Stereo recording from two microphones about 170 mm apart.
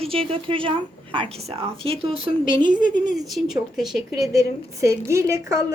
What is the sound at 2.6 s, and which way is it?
Speech, 50° left (ahead or behind).